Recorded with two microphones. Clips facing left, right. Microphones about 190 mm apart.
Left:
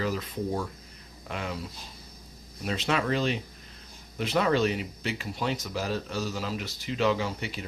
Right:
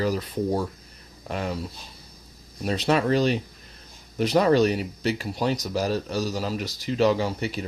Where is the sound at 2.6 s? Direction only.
40° right (ahead or behind).